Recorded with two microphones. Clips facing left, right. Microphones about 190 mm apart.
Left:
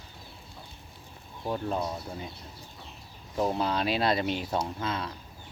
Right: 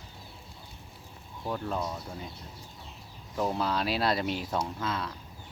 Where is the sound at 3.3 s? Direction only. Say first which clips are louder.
Left 2 dB; 20° left (ahead or behind).